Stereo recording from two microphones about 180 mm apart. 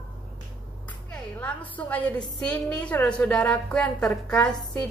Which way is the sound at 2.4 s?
5° left (ahead or behind).